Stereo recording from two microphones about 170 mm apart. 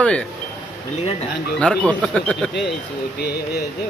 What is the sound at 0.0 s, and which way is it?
Speech, 5° left (ahead or behind).